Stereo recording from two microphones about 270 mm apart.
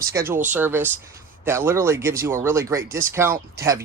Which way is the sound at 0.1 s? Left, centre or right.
Centre.